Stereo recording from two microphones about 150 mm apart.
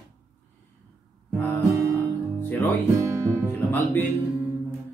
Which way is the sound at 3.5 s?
15° left (ahead or behind).